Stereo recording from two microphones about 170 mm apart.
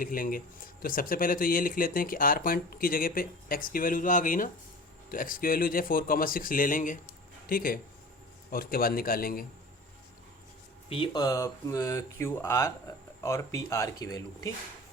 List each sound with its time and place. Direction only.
0.0 s speech: 55° left (ahead or behind)
10.8 s speech: 30° left (ahead or behind)